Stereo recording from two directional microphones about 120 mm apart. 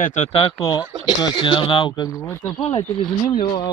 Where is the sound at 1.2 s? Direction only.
45° left (ahead or behind).